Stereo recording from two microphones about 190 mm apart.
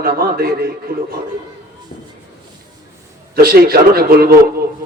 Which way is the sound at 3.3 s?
55° right (ahead or behind).